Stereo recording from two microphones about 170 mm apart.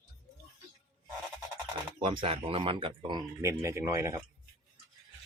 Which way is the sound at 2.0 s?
35° right (ahead or behind).